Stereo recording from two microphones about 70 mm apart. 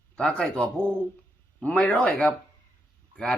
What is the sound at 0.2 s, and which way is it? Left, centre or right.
Speech, centre.